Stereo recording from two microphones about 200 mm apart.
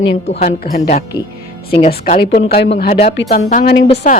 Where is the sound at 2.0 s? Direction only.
40° left (ahead or behind).